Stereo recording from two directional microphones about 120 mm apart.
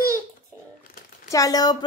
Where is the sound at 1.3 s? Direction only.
30° left (ahead or behind).